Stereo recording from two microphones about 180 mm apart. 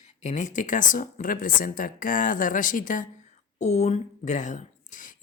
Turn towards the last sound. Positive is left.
turn(degrees=45)  # may be behind; listen again after turning